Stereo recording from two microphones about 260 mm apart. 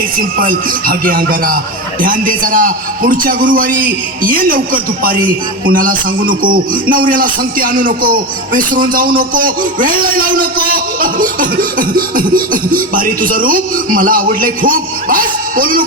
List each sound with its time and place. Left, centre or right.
0.3 s speech: right